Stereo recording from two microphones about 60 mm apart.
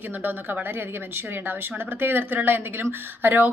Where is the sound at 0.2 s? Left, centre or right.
Right.